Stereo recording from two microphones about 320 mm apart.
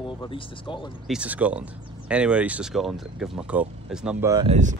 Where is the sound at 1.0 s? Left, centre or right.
Centre; by 4.7 s right.